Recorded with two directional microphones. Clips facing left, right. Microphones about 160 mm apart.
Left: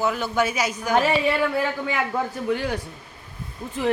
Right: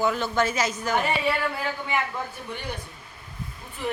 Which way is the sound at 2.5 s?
90° left.